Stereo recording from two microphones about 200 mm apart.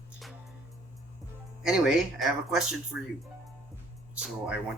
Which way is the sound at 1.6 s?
Centre (ahead or behind).